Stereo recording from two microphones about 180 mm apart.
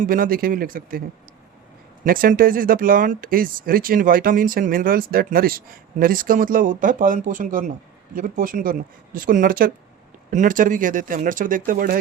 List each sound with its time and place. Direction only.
0.0 s speech: 50° right (ahead or behind)
2.0 s speech: 55° right (ahead or behind)